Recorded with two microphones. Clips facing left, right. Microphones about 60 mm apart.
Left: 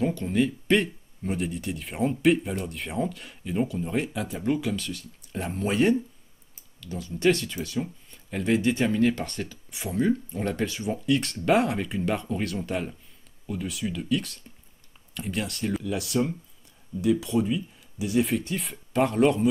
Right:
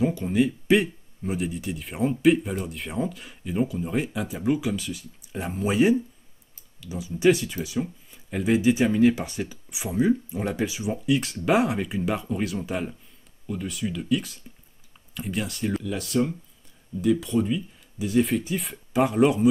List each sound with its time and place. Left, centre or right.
0.0 s speech: centre